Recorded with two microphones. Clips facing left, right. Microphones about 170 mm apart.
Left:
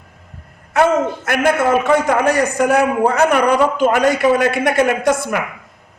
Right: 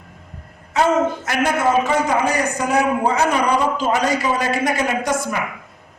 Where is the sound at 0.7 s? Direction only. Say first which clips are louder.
Left 2 dB; 60° left (ahead or behind).